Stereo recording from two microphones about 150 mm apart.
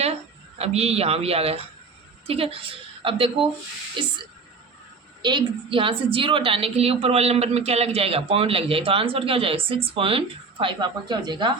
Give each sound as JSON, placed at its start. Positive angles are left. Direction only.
{"t": 0.6, "sound": "a woman's voice", "side_deg": -45}
{"t": 5.2, "sound": "a woman's voice", "side_deg": -30}